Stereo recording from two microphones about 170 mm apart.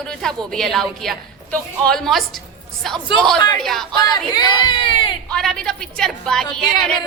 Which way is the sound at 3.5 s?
Centre (ahead or behind).